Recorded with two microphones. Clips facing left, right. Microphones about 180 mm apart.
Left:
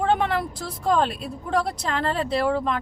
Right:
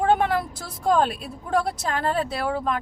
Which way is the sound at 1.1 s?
Centre (ahead or behind).